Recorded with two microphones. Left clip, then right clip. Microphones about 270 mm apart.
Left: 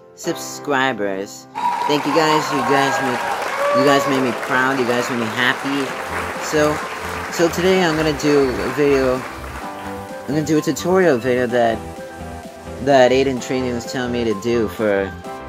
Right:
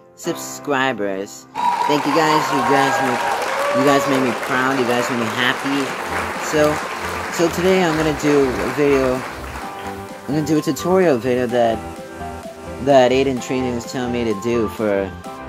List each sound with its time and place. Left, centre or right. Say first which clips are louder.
0.3 s speech: left 1 dB; centre
10.3 s speech: even; centre
12.8 s speech: even; centre